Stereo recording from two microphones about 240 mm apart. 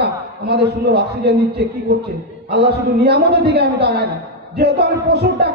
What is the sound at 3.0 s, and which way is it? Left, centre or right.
A woman's voice, right.